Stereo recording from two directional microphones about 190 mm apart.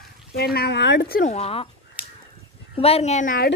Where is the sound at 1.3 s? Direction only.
30° left (ahead or behind).